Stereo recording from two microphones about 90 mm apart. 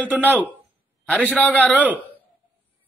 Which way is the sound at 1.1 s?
15° left (ahead or behind).